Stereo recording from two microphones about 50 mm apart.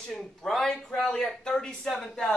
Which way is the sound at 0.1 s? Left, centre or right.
Centre.